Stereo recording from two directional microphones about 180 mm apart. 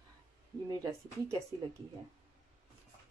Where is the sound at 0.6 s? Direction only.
20° right (ahead or behind).